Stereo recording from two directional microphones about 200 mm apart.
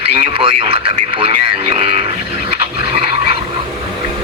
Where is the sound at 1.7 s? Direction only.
30° right (ahead or behind).